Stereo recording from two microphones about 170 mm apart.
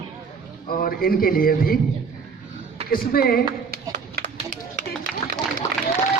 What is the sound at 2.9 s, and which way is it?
Speech, 60° left (ahead or behind).